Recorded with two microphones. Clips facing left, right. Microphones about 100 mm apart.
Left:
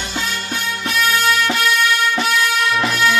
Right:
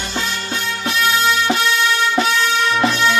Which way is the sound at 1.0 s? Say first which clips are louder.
Even; centre (ahead or behind).